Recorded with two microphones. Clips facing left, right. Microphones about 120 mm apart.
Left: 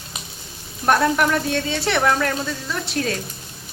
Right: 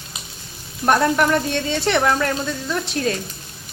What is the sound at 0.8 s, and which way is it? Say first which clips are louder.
Speech: right 1 dB; centre (ahead or behind).